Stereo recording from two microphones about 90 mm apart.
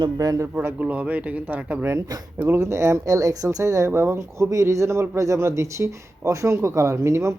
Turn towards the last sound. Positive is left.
turn(degrees=-30)  # may be behind; listen again after turning